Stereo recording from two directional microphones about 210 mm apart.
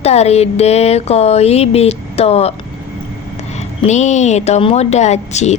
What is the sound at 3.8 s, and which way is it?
Speech, 35° left (ahead or behind).